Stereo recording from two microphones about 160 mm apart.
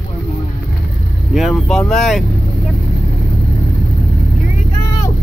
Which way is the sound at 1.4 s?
Centre (ahead or behind).